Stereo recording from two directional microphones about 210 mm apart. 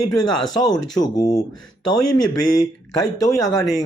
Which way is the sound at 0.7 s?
20° left (ahead or behind).